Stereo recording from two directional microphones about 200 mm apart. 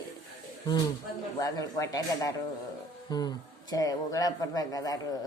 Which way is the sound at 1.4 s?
20° left (ahead or behind).